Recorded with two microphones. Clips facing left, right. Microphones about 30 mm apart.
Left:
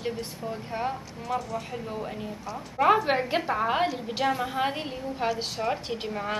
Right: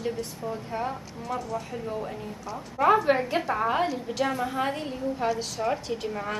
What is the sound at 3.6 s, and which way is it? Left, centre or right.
Speech, centre.